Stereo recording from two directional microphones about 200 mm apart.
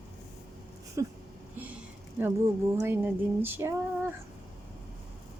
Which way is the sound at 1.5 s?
10° right (ahead or behind).